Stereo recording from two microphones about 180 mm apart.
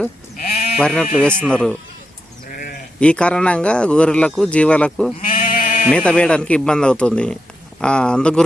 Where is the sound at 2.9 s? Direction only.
5° left (ahead or behind).